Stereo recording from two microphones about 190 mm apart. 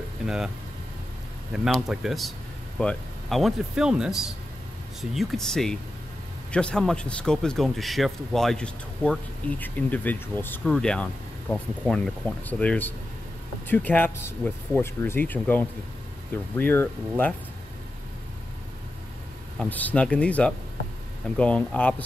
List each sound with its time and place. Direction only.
1.5 s speech: 5° right (ahead or behind)
19.6 s speech: 10° left (ahead or behind)